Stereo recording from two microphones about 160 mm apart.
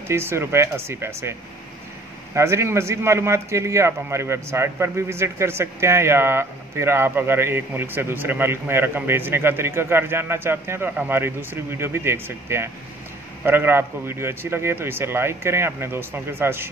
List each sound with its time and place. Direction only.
0.1 s a man's voice: 15° right (ahead or behind)
2.3 s a man's voice: 15° right (ahead or behind)